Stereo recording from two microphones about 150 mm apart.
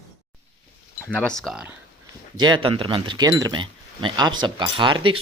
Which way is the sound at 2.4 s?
30° right (ahead or behind).